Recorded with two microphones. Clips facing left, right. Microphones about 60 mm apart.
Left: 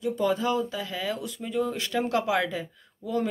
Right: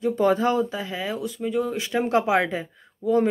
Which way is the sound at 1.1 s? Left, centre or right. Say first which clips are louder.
Right 7 dB; centre.